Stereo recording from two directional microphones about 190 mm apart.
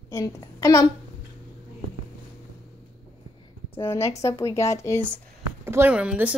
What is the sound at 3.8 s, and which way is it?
A woman's voice, 15° left (ahead or behind).